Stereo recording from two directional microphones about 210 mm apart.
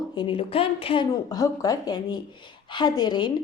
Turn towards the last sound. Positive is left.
turn(degrees=20)  # may be behind; listen again after turning